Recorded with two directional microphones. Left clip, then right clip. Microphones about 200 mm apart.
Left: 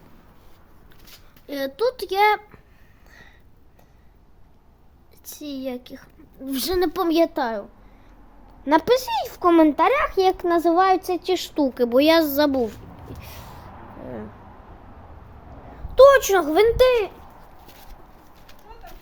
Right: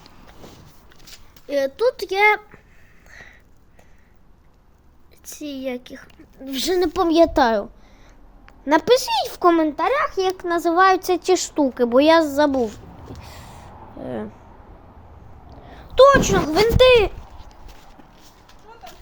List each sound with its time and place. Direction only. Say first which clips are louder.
1.5 s a child's voice: right 4 dB; centre (ahead or behind)
3.1 s a sound: right 6 dB; 10° right (ahead or behind)
5.2 s speech: right 2 dB; 10° right (ahead or behind)
7.3 s a woman's voice: right 8 dB; 35° right (ahead or behind)
8.6 s speech: right 2 dB; centre (ahead or behind)
9.6 s speech: left 4 dB; 30° left (ahead or behind)
9.9 s speech: even; 20° left (ahead or behind)
10.2 s speech: left 2 dB; 30° left (ahead or behind)
10.6 s speech: right 4 dB; 15° left (ahead or behind)
11.0 s speech: right 5 dB; 10° right (ahead or behind)
11.7 s a child's voice: right 2 dB; centre (ahead or behind)
13.2 s a sound: even; 5° left (ahead or behind)
14.0 s speech: right 6 dB; 25° right (ahead or behind)
16.0 s a child's voice: even; 5° left (ahead or behind)